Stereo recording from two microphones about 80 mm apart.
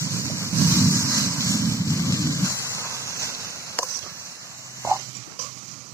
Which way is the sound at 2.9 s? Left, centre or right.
Right.